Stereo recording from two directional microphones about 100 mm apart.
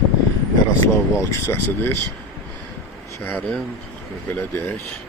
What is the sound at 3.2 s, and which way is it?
Speech, 20° left (ahead or behind).